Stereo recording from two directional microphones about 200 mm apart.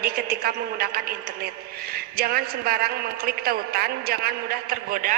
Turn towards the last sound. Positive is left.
turn(degrees=-45)  # may be behind; listen again after turning